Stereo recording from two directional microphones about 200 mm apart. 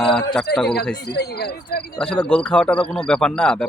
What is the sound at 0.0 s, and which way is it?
Speech, centre (ahead or behind).